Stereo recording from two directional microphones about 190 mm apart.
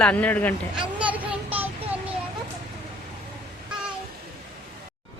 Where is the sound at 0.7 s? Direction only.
5° right (ahead or behind).